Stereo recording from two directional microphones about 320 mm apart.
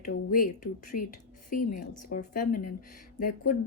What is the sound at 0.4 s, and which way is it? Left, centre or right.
Speech, left.